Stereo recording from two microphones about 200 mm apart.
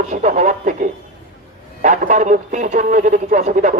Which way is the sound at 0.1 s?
35° right (ahead or behind).